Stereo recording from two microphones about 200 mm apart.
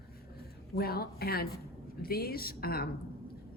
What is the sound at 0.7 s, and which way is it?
Speech, 50° left (ahead or behind).